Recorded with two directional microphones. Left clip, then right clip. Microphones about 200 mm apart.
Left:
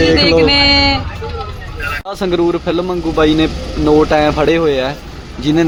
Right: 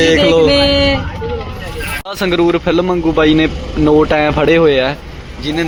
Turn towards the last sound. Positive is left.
turn(degrees=25)  # may be behind; listen again after turning